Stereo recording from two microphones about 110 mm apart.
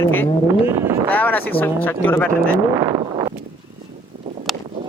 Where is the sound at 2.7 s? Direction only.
35° right (ahead or behind).